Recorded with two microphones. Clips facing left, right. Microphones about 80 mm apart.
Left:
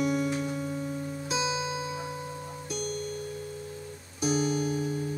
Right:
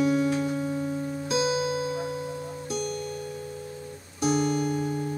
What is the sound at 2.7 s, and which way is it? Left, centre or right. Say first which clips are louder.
Music: right 2 dB; right.